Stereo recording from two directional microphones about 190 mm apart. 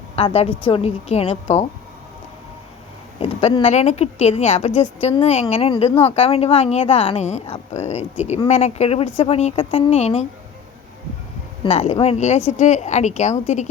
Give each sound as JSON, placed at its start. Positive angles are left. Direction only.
{"t": 0.2, "sound": "a woman's voice", "side_deg": 30}
{"t": 3.2, "sound": "a woman's voice", "side_deg": 30}
{"t": 11.6, "sound": "a woman's voice", "side_deg": 35}